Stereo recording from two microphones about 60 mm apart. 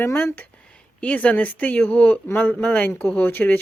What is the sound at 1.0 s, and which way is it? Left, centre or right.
Speech, left.